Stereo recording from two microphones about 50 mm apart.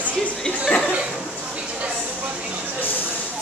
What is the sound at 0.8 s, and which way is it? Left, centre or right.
Chuckle, centre.